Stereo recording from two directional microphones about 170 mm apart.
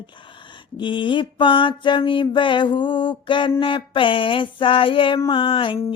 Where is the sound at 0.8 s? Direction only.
30° left (ahead or behind).